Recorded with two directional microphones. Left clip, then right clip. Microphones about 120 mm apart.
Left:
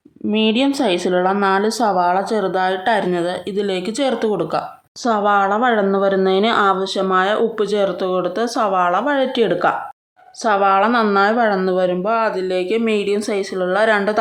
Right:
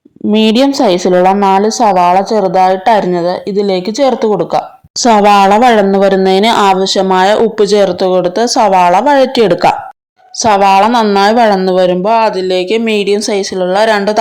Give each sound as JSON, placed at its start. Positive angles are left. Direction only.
{"t": 0.3, "sound": "speech", "side_deg": -70}
{"t": 0.7, "sound": "a woman's voice", "side_deg": -40}
{"t": 1.2, "sound": "speech", "side_deg": -35}
{"t": 5.0, "sound": "a woman's voice", "side_deg": -50}
{"t": 6.7, "sound": "speech", "side_deg": -30}